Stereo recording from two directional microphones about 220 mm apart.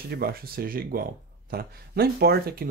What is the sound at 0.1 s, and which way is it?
Speech, 45° right (ahead or behind).